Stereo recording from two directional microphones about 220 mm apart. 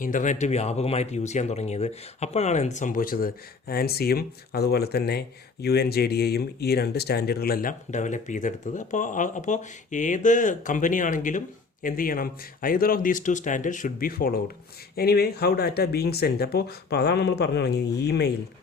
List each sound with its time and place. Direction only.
0.0 s speech: 35° left (ahead or behind)